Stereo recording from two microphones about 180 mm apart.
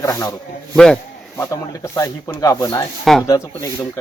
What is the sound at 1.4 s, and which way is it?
Speech, 15° left (ahead or behind).